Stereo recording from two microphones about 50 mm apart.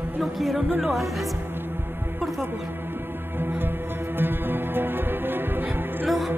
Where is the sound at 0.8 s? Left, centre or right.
Centre.